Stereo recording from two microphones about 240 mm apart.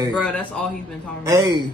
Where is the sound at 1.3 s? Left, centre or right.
Centre.